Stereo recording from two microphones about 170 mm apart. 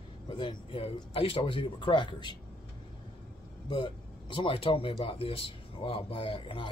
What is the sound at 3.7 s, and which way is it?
Speech, 30° left (ahead or behind).